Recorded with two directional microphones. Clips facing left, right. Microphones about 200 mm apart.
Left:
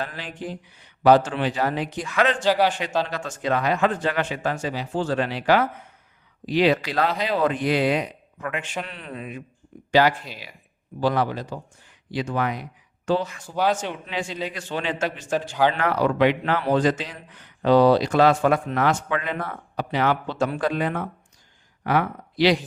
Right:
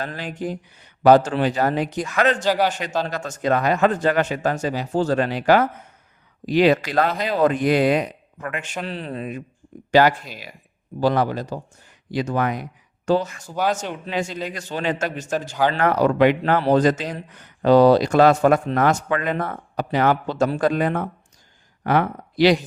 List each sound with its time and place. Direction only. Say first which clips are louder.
0.0 s speech: right 4 dB; 45° right (ahead or behind)
8.9 s speech: right 6 dB; 35° right (ahead or behind)